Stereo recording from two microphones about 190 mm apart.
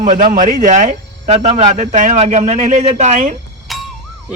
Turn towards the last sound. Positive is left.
turn(degrees=0)  # may be behind; listen again after turning